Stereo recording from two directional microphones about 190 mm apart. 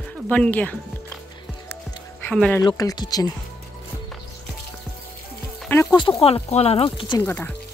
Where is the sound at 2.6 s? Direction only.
20° left (ahead or behind).